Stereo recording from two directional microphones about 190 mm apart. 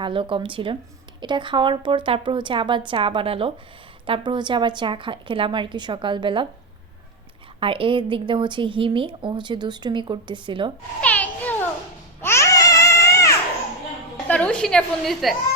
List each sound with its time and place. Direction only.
0.0 s a woman's voice: 25° right (ahead or behind)
7.6 s a woman's voice: 25° right (ahead or behind)
11.0 s a sound: 10° left (ahead or behind)
12.2 s baby cry: 15° left (ahead or behind)
14.3 s a woman's voice: 5° left (ahead or behind)